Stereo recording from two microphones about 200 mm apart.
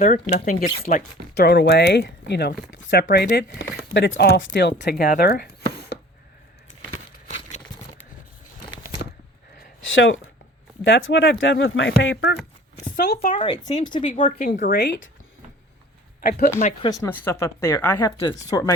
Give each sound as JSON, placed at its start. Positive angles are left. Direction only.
{"t": 0.0, "sound": "speech", "side_deg": 45}
{"t": 9.9, "sound": "speech", "side_deg": 75}
{"t": 12.1, "sound": "speech", "side_deg": 50}
{"t": 13.3, "sound": "speech", "side_deg": 25}
{"t": 14.4, "sound": "speech", "side_deg": 35}
{"t": 14.7, "sound": "speech", "side_deg": 55}
{"t": 16.6, "sound": "speech", "side_deg": 35}
{"t": 16.9, "sound": "speech", "side_deg": 15}